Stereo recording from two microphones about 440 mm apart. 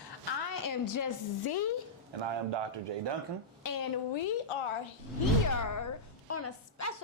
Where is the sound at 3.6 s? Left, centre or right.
Left.